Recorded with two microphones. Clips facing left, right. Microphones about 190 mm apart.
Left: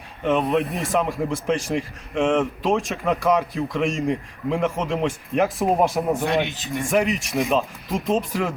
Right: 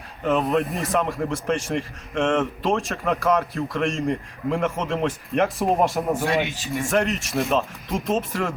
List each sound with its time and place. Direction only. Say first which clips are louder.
0.3 s a man's voice: left 1 dB; centre (ahead or behind)
6.5 s speech: right 1 dB; 20° left (ahead or behind)
6.7 s a man's voice: left 1 dB; centre (ahead or behind)